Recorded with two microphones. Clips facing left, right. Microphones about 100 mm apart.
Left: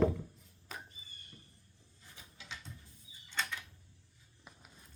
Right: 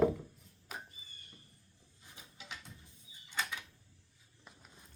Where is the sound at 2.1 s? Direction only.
15° right (ahead or behind).